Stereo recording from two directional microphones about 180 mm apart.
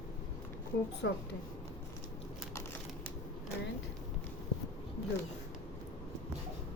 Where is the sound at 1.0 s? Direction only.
75° left (ahead or behind).